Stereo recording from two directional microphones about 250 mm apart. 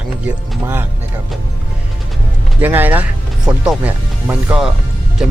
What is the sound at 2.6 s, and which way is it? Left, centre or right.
Speech, centre.